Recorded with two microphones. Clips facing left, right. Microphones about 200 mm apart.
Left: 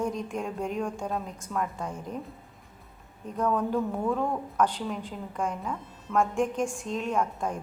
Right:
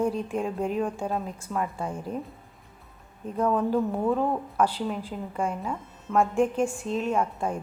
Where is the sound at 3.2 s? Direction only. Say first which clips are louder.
Right 3 dB; 5° right (ahead or behind).